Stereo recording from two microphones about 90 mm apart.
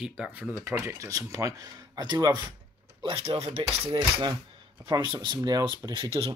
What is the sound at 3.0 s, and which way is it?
Speech, 85° right.